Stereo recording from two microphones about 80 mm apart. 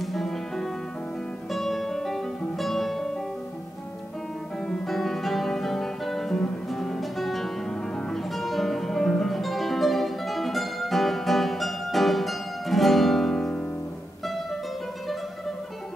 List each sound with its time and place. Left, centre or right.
0.0 s music: centre
4.6 s guitar: centre
8.1 s music: centre